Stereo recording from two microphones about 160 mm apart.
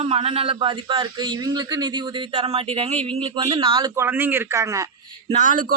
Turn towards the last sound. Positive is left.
turn(degrees=-55)  # may be behind; listen again after turning